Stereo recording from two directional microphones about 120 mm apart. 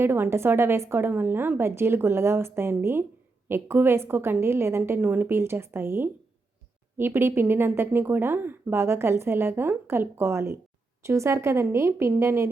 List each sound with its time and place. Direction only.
0.0 s speech: 20° right (ahead or behind)